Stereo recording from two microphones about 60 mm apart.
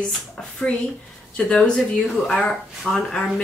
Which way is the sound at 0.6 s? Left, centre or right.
Centre.